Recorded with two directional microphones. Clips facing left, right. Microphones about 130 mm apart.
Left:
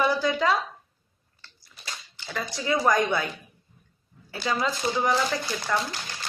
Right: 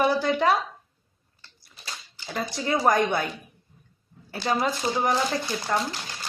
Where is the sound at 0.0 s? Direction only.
50° right (ahead or behind).